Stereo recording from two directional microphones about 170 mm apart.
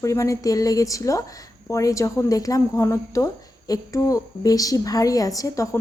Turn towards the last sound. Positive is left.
turn(degrees=20)  # may be behind; listen again after turning